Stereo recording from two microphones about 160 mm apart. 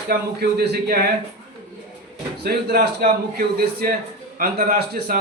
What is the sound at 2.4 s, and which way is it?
A man's voice, 85° right.